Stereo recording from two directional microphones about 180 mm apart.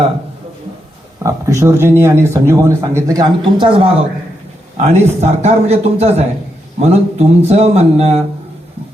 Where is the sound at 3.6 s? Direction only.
30° right (ahead or behind).